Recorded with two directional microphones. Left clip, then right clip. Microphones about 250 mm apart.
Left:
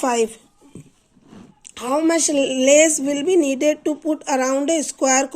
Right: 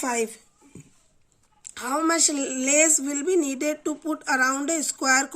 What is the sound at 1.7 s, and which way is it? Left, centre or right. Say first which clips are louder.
Speech: left 5 dB; centre.